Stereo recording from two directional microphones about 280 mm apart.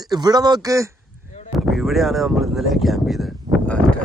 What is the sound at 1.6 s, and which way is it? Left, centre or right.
Speech, centre.